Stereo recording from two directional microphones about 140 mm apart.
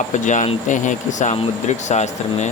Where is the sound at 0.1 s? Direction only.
60° left (ahead or behind).